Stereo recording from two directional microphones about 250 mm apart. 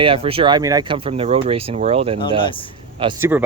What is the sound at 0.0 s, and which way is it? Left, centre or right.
Speech, right.